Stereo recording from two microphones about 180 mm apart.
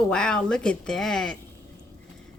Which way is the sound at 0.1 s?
5° left (ahead or behind).